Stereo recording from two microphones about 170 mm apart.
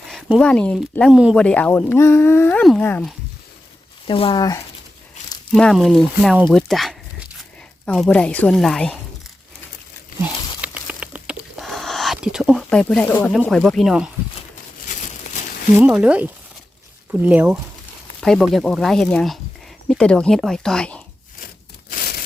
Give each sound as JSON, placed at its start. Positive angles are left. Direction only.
{"t": 0.1, "sound": "speech", "side_deg": 0}
{"t": 1.1, "sound": "speech", "side_deg": -5}
{"t": 4.0, "sound": "speech", "side_deg": 30}
{"t": 5.5, "sound": "speech", "side_deg": 5}
{"t": 10.2, "sound": "a sound", "side_deg": -10}
{"t": 13.2, "sound": "speech", "side_deg": 5}
{"t": 14.8, "sound": "crumpling", "side_deg": 45}
{"t": 15.8, "sound": "speech", "side_deg": -5}
{"t": 18.2, "sound": "speech", "side_deg": 0}
{"t": 21.4, "sound": "a sound", "side_deg": 60}